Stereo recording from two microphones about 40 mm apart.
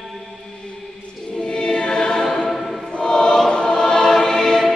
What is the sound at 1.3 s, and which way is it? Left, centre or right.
Choir, left.